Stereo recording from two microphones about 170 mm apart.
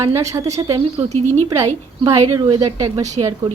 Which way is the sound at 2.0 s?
20° right (ahead or behind).